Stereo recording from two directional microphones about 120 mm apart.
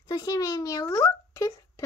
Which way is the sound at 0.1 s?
30° left (ahead or behind).